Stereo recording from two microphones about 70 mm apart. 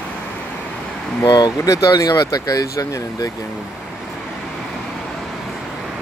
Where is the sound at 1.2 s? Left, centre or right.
Left.